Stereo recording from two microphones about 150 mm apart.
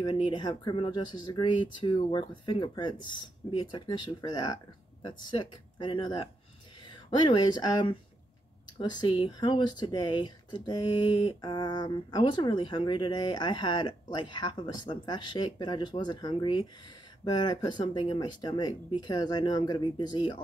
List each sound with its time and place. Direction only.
0.0 s speech: 30° left (ahead or behind)